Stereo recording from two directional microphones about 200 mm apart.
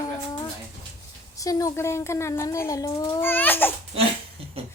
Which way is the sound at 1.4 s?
15° left (ahead or behind).